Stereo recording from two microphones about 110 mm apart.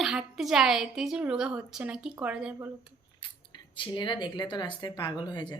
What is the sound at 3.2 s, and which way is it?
Scissors, 45° left (ahead or behind).